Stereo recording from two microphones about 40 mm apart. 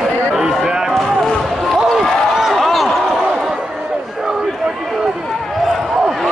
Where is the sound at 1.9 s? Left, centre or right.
Centre.